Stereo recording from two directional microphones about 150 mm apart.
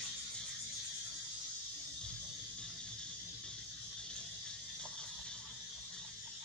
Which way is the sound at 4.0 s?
5° left (ahead or behind).